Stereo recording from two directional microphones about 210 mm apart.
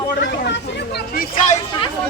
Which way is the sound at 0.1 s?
55° left (ahead or behind).